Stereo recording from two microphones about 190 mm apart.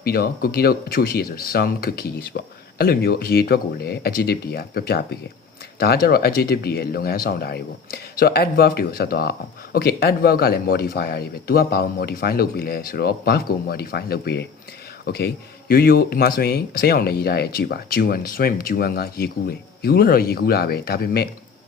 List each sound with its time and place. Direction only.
0.0 s speech: 50° left (ahead or behind)